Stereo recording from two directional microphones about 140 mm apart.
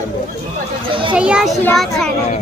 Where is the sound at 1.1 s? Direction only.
5° right (ahead or behind).